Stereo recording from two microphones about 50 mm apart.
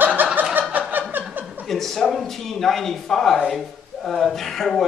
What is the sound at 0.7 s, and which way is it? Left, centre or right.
Snicker, right.